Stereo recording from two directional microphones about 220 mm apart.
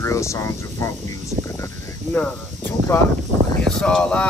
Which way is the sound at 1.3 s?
30° right (ahead or behind).